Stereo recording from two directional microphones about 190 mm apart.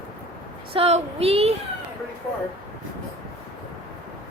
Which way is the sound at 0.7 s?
30° right (ahead or behind).